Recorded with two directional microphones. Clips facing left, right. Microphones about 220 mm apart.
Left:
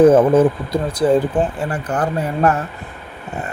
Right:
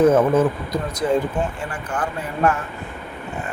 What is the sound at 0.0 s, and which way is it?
Speech, 30° left (ahead or behind).